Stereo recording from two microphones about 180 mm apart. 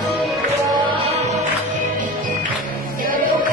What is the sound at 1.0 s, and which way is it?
Music, 35° right (ahead or behind).